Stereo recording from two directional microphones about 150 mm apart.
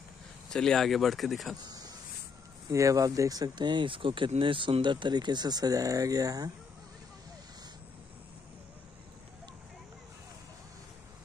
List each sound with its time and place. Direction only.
0.5 s speech: 5° left (ahead or behind)
1.6 s a sound: 25° right (ahead or behind)
2.7 s speech: 20° right (ahead or behind)